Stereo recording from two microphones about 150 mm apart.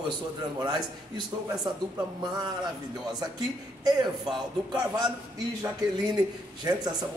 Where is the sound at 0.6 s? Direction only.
30° right (ahead or behind).